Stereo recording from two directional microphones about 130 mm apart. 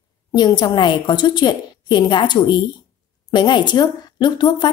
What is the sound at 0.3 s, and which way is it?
Speech, 35° left (ahead or behind).